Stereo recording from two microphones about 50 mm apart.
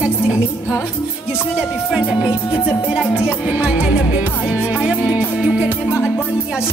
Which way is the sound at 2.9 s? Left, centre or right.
Centre.